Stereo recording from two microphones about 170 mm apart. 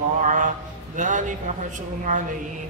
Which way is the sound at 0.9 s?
50° right (ahead or behind).